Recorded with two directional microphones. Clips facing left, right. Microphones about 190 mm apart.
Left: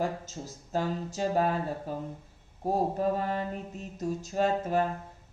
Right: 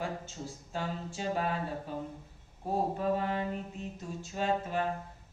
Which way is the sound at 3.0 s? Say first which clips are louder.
Left 2 dB; 40° left (ahead or behind).